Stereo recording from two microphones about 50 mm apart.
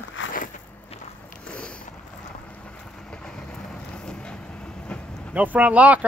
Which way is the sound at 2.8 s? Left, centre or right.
Centre.